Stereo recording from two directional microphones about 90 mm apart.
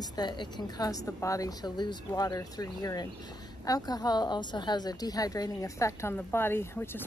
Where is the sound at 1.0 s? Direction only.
35° left (ahead or behind).